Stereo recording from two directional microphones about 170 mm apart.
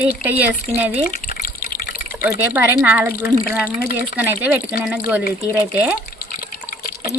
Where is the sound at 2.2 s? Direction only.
10° right (ahead or behind).